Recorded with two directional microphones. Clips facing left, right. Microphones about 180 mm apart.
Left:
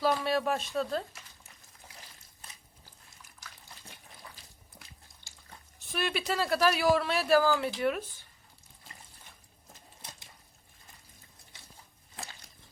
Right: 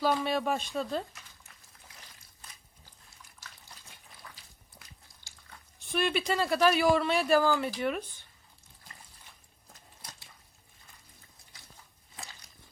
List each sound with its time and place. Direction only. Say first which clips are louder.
0.0 s speech: even; centre (ahead or behind)
5.8 s speech: right 3 dB; centre (ahead or behind)